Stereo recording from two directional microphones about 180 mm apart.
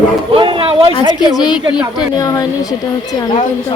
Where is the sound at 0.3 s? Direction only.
30° right (ahead or behind).